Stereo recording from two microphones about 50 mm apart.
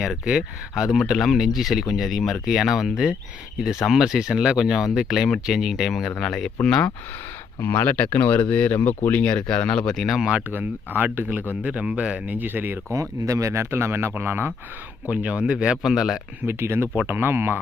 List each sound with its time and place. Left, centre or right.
0.0 s speech: centre
6.0 s speech: centre
7.6 s speech: left
9.1 s speech: centre
10.0 s speech: centre
10.5 s speech: right
11.6 s speech: right
12.9 s speech: right
13.7 s speech: right
14.1 s speech: right
15.1 s speech: right
15.5 s speech: centre
16.5 s speech: right